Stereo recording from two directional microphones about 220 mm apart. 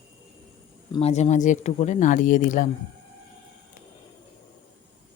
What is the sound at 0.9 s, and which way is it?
Speech, 30° left (ahead or behind).